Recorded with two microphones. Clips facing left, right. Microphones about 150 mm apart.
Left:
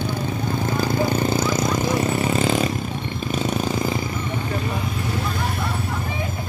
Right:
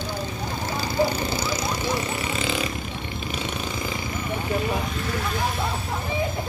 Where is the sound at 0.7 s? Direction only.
50° left (ahead or behind).